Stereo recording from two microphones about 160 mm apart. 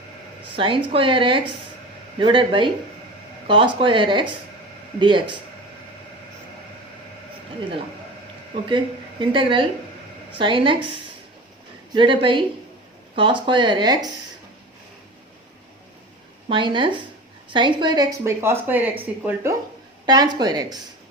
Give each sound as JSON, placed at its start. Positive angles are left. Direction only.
{"t": 0.5, "sound": "a woman's voice", "side_deg": -30}
{"t": 8.7, "sound": "a woman's voice", "side_deg": -30}
{"t": 11.9, "sound": "a woman's voice", "side_deg": -30}
{"t": 16.5, "sound": "a woman's voice", "side_deg": -30}
{"t": 18.2, "sound": "speech", "side_deg": -15}
{"t": 20.1, "sound": "speech", "side_deg": -25}